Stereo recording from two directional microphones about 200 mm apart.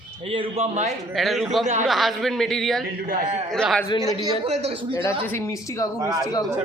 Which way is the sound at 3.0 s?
45° right (ahead or behind).